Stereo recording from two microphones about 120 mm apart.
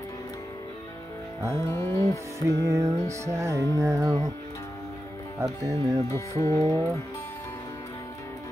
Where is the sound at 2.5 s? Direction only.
25° right (ahead or behind).